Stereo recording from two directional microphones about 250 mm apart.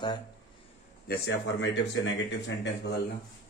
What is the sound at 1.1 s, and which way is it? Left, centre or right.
Speech, left.